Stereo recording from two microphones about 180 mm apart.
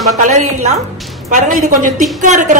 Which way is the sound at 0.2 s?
40° right (ahead or behind).